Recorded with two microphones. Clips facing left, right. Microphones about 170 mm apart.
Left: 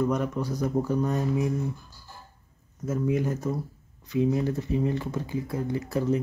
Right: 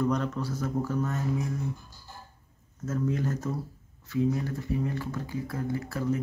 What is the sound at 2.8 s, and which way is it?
Speech, 10° left (ahead or behind).